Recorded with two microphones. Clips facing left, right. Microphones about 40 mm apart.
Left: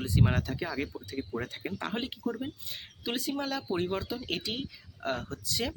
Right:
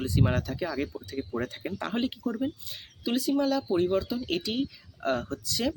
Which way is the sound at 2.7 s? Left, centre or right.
Left.